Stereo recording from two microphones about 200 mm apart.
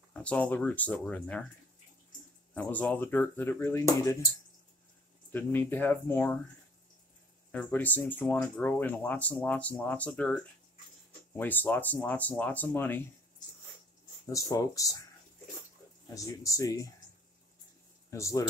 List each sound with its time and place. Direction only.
0.1 s speech: 5° left (ahead or behind)
2.5 s speech: 10° left (ahead or behind)
5.3 s speech: 10° left (ahead or behind)
7.5 s speech: 10° left (ahead or behind)
14.3 s speech: 20° left (ahead or behind)
16.2 s speech: 15° left (ahead or behind)
18.1 s speech: 15° left (ahead or behind)